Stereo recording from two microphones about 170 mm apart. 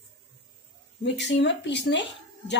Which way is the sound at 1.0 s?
90° left.